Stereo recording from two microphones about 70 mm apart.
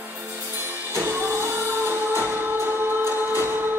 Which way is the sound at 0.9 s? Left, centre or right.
Right.